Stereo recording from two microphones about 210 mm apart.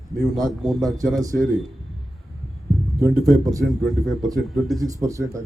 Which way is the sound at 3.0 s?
15° right (ahead or behind).